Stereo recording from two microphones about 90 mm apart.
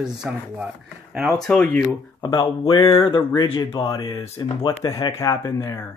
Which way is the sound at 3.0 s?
75° left (ahead or behind).